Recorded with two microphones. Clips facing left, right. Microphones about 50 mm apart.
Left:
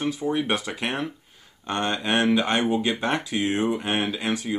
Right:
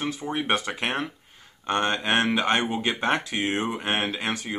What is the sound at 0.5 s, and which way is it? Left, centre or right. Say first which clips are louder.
Speech: right 1 dB; right.